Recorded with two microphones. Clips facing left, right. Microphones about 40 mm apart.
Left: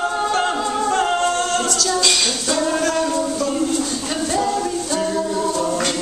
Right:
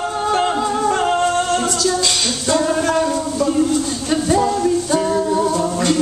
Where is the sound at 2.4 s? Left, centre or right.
Centre.